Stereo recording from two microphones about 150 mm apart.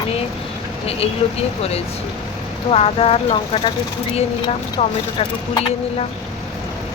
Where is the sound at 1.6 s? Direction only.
45° left (ahead or behind).